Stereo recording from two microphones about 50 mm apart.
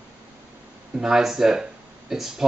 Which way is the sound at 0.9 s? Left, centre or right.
Centre.